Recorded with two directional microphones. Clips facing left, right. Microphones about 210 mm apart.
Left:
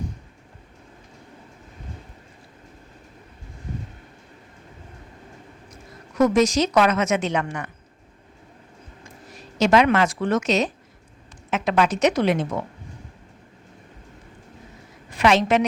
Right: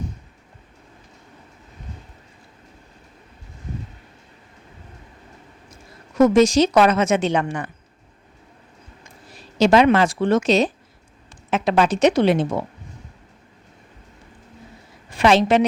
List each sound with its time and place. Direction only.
5.7 s a woman's voice: 25° right (ahead or behind)
9.3 s a woman's voice: 30° right (ahead or behind)
15.1 s a woman's voice: 30° right (ahead or behind)